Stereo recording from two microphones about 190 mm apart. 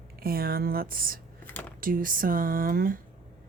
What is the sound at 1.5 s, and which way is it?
Computer keyboard, 10° left (ahead or behind).